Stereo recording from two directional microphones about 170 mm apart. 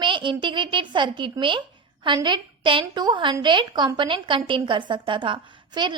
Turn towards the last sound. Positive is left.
turn(degrees=-25)  # may be behind; listen again after turning